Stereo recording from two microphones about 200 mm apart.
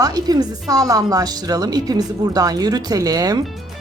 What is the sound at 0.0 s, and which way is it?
Speech, 20° right (ahead or behind).